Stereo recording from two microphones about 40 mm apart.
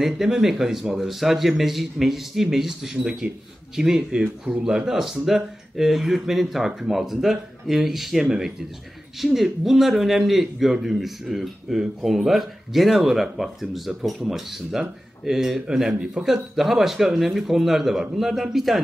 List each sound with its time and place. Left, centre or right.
0.0 s a man's voice: centre